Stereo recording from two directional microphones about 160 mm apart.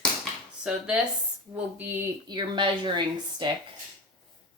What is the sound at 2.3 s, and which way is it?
Speech, 30° right (ahead or behind).